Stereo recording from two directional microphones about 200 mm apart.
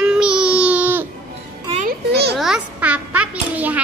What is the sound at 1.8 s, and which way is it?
Speech, 55° right (ahead or behind).